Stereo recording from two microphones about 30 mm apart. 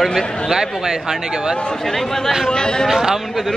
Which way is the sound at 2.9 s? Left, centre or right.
Centre.